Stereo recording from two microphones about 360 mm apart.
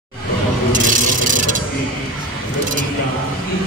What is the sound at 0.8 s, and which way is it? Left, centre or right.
Vehicle, right.